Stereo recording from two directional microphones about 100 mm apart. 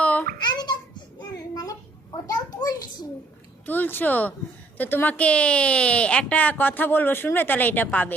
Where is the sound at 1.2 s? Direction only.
40° left (ahead or behind).